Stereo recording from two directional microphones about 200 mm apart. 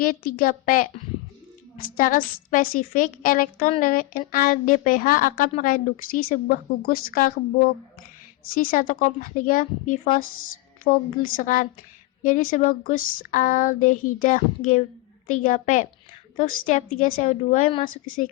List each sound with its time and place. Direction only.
0.0 s a woman's voice: 45° left (ahead or behind)
8.5 s a woman's voice: 45° left (ahead or behind)